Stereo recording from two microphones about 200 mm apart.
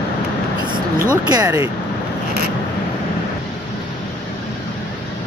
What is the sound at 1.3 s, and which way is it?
Speech, 20° right (ahead or behind).